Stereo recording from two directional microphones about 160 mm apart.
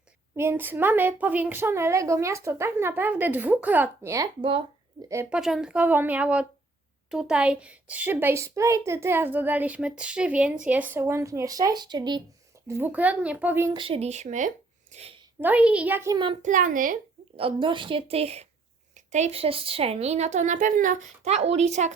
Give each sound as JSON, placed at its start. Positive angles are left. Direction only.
{"t": 0.3, "sound": "a child's voice", "side_deg": -15}
{"t": 4.4, "sound": "a woman's voice", "side_deg": -35}
{"t": 5.0, "sound": "a child's voice", "side_deg": -15}
{"t": 5.3, "sound": "a child's voice", "side_deg": -5}
{"t": 12.6, "sound": "a child's voice", "side_deg": -15}
{"t": 13.7, "sound": "speech", "side_deg": -35}
{"t": 15.4, "sound": "a child's voice", "side_deg": -10}
{"t": 16.4, "sound": "a woman's voice", "side_deg": -55}
{"t": 17.3, "sound": "a woman's voice", "side_deg": -35}